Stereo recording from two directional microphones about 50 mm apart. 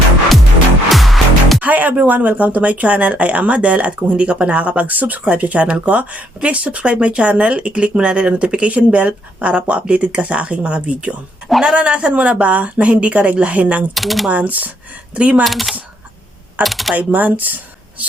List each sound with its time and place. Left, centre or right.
0.9 s music: centre
1.6 s speech: right
13.9 s speech: centre
14.3 s speech: right
15.4 s speech: centre
16.9 s speech: right